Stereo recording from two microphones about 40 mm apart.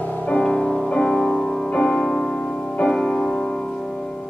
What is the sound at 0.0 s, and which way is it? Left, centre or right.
Music, left.